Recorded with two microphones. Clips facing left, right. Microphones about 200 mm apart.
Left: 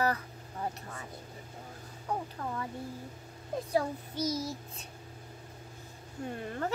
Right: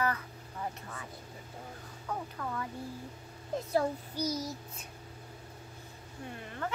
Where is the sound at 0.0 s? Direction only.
35° left (ahead or behind).